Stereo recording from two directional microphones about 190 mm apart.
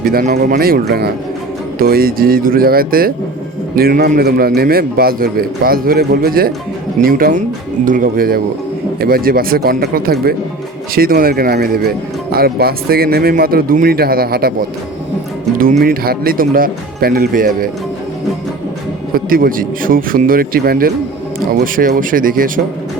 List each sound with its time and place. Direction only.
0.0 s speech: 50° right (ahead or behind)
15.5 s speech: 50° right (ahead or behind)
19.1 s speech: 50° right (ahead or behind)